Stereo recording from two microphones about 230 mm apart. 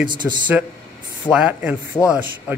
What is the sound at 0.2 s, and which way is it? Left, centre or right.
A man's voice, centre.